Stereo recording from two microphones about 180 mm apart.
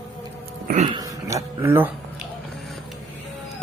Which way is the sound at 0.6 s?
45° right (ahead or behind).